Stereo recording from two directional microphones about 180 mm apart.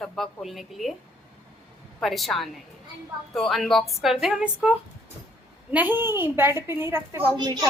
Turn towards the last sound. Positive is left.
turn(degrees=-25)  # may be behind; listen again after turning